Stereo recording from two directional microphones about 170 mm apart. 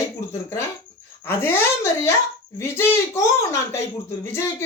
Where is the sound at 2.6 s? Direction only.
15° left (ahead or behind).